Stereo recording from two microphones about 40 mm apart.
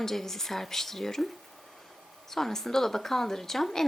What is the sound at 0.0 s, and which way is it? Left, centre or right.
Speech, centre.